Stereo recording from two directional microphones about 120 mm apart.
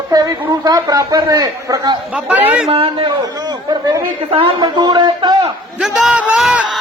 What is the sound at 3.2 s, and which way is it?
Chatter, 30° right (ahead or behind).